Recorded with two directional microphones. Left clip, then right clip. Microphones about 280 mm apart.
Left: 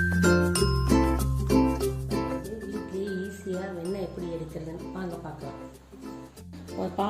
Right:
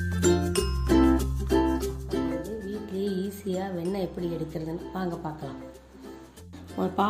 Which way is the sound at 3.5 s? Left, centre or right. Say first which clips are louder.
Right 2 dB; right.